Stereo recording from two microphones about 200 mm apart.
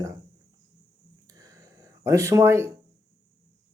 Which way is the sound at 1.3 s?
15° right (ahead or behind).